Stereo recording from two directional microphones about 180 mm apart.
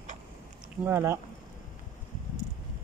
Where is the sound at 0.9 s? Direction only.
15° right (ahead or behind).